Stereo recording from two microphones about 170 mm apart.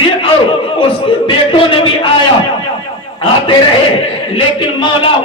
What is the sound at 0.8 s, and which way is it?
A man's voice, 30° left (ahead or behind).